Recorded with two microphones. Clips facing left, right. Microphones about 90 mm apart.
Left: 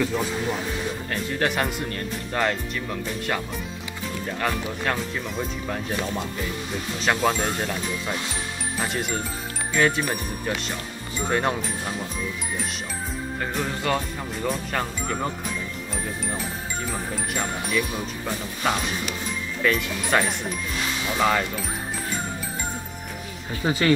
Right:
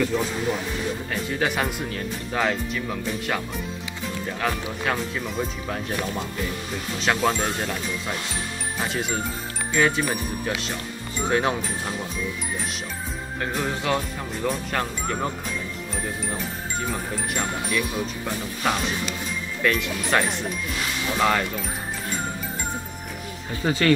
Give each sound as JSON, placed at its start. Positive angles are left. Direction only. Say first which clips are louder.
{"t": 0.0, "sound": "speech", "louder": "right 1 dB", "side_deg": 0}
{"t": 13.4, "sound": "speech", "louder": "right 2 dB", "side_deg": 0}
{"t": 16.9, "sound": "speech", "louder": "right 1 dB", "side_deg": 0}
{"t": 23.6, "sound": "speech", "louder": "even", "side_deg": 10}